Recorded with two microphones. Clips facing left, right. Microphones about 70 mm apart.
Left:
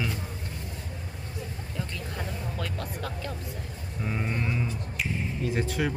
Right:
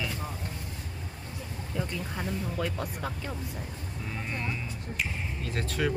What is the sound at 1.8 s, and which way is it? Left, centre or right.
Speech, centre.